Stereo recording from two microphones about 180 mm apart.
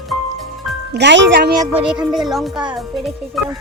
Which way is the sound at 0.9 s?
75° right (ahead or behind).